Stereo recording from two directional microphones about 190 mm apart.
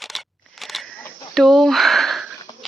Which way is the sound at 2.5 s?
20° left (ahead or behind).